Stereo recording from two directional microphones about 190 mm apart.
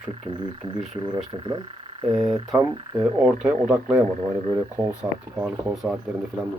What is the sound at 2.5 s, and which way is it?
Speech, 10° right (ahead or behind).